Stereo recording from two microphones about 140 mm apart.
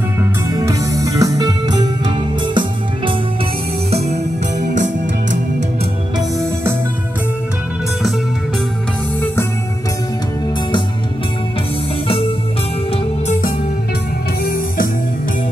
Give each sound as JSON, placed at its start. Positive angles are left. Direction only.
{"t": 0.2, "sound": "music", "side_deg": -20}
{"t": 3.9, "sound": "music", "side_deg": -55}
{"t": 6.1, "sound": "music", "side_deg": -20}